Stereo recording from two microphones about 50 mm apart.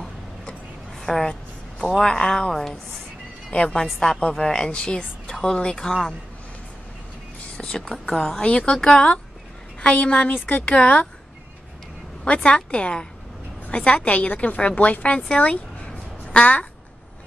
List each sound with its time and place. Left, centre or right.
1.0 s a sound: centre
2.0 s speech: centre
3.5 s a woman's voice: left
3.8 s speech: centre
7.5 s a woman's voice: centre
8.7 s speech: centre
9.8 s a woman's voice: left
12.4 s a woman's voice: left
15.3 s a sound: left